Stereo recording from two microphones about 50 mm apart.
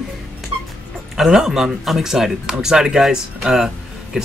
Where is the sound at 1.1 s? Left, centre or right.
Centre.